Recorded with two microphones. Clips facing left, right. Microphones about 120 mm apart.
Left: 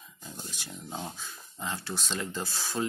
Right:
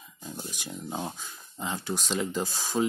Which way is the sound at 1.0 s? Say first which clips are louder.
Right 3 dB; 15° right (ahead or behind).